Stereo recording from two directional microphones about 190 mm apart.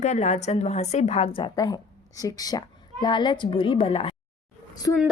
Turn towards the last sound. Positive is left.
turn(degrees=20)  # may be behind; listen again after turning